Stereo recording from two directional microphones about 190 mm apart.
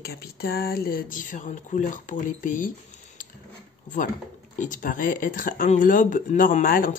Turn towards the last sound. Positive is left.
turn(degrees=45)  # may be behind; listen again after turning